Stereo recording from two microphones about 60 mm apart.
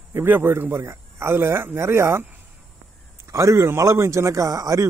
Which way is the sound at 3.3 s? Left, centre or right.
Right.